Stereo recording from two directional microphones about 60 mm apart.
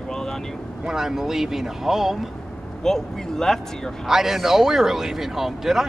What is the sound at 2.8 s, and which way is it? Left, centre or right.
Speech, centre.